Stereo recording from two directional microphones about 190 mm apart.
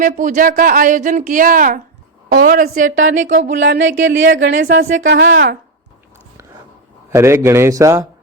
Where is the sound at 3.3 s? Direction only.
70° right (ahead or behind).